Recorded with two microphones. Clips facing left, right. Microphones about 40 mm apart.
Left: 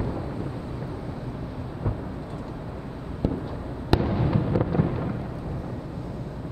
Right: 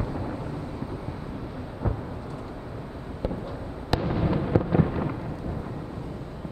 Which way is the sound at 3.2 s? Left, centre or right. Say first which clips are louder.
Left 4 dB; centre.